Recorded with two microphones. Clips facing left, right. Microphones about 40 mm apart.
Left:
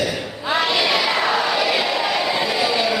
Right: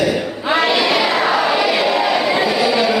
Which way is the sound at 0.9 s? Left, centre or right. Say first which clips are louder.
Right 3 dB; centre.